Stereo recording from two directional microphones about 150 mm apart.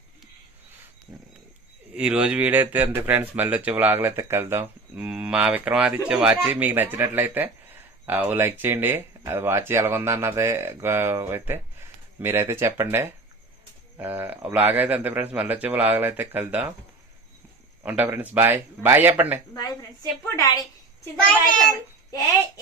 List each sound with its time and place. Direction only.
1.9 s speech: 5° right (ahead or behind)
17.8 s speech: 15° right (ahead or behind)
20.3 s a woman's voice: 20° left (ahead or behind)